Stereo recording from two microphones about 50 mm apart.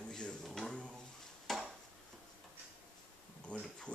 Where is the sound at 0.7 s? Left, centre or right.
Centre.